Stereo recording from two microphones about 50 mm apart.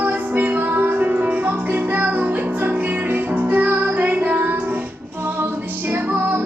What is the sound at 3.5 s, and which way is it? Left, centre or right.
Music, right.